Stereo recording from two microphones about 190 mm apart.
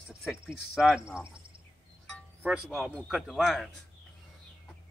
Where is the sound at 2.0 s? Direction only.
5° right (ahead or behind).